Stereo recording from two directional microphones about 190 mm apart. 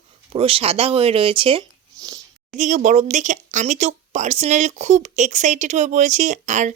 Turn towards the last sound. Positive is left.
turn(degrees=-40)  # may be behind; listen again after turning